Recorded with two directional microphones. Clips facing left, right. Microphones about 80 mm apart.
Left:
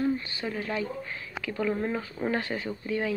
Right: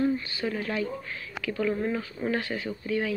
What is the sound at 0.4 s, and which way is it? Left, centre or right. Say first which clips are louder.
Speech: right 2 dB; centre.